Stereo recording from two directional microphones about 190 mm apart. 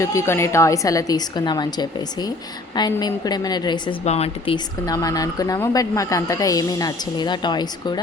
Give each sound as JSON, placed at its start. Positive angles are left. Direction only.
{"t": 0.0, "sound": "a woman's voice", "side_deg": 15}
{"t": 4.0, "sound": "speech", "side_deg": 35}